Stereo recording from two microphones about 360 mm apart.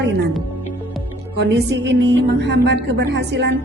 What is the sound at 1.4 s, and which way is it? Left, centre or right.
A woman's voice, right.